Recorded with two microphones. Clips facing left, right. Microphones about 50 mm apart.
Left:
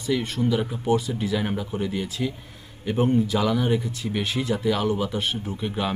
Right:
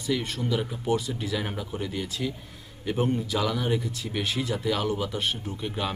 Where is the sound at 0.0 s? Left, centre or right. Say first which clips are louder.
Left 4 dB; centre.